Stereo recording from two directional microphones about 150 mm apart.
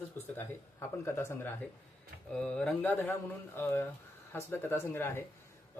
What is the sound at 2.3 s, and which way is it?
A man's voice, 5° left (ahead or behind).